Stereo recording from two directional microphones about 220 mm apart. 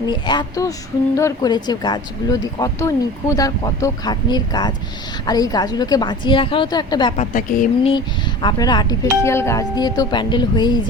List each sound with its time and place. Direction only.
0.0 s a woman's voice: 20° left (ahead or behind)
7.2 s a woman's voice: 35° left (ahead or behind)
7.9 s a woman's voice: 20° left (ahead or behind)